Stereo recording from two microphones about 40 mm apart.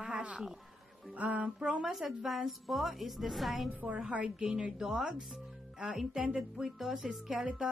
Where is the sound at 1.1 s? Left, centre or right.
Right.